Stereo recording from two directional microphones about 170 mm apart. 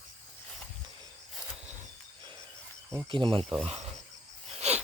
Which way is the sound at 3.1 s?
30° right (ahead or behind).